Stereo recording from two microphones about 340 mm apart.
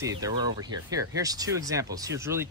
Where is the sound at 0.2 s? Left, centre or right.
Centre.